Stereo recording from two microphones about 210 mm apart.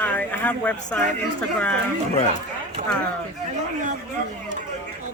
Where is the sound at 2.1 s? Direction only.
30° left (ahead or behind).